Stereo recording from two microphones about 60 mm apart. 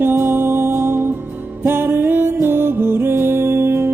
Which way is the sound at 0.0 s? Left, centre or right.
Right.